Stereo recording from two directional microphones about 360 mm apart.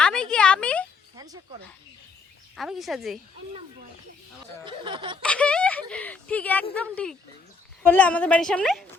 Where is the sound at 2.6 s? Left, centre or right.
Centre.